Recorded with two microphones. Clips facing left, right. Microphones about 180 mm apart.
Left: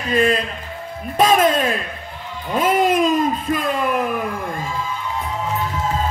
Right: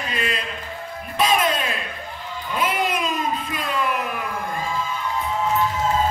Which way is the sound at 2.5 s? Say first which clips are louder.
Left 7 dB; 45° left (ahead or behind).